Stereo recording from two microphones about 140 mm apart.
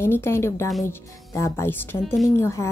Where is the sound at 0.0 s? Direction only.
20° left (ahead or behind).